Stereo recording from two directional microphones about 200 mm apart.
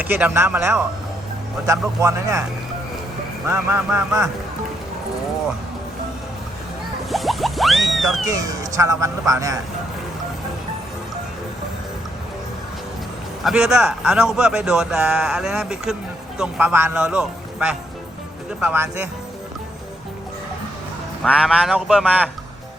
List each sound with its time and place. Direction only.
0.0 s speech: 10° right (ahead or behind)
3.4 s speech: 10° right (ahead or behind)
7.1 s boing: centre (ahead or behind)
8.3 s speech: 15° right (ahead or behind)
13.4 s a man's voice: 5° right (ahead or behind)
21.2 s a man's voice: 5° right (ahead or behind)